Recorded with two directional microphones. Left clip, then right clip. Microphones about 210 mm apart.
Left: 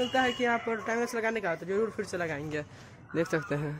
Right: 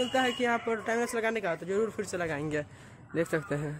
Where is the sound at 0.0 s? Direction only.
Centre (ahead or behind).